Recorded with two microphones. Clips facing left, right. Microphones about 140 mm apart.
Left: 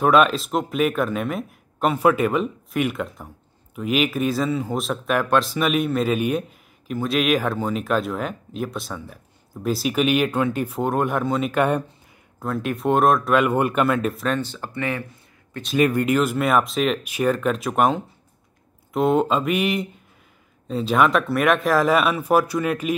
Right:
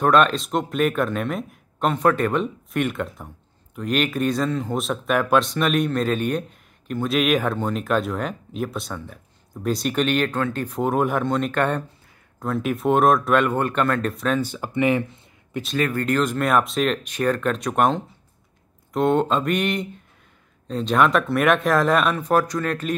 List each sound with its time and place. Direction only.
0.0 s speech: 5° left (ahead or behind)
10.8 s speech: centre (ahead or behind)
14.4 s speech: 15° right (ahead or behind)
15.8 s speech: 15° left (ahead or behind)